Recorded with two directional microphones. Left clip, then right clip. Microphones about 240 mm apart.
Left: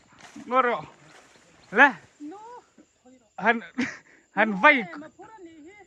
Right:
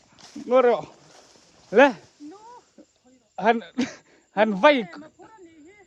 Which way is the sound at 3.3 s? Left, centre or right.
Centre.